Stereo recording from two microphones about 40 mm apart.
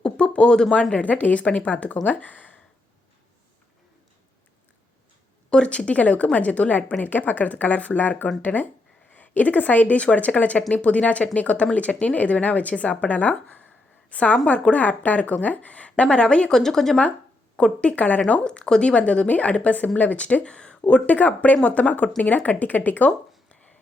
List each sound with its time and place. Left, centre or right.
0.0 s a sound: left
0.9 s speech: left
5.5 s speech: left
16.0 s speech: left
16.5 s speech: centre
17.6 s speech: left
17.9 s speech: left
18.4 s speech: left
21.1 s speech: left